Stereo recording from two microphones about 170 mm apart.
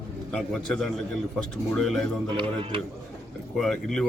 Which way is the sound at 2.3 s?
30° right (ahead or behind).